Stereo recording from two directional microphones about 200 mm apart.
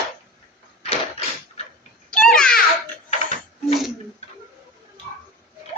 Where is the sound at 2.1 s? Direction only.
5° left (ahead or behind).